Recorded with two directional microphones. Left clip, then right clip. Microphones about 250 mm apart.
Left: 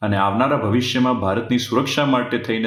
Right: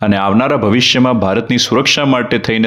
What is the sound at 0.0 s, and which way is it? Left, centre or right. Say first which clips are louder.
Speech: right 5 dB; right.